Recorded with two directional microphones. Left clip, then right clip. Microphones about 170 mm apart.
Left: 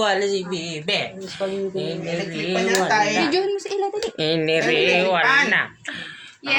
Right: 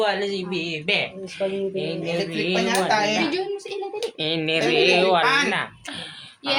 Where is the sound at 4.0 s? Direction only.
30° left (ahead or behind).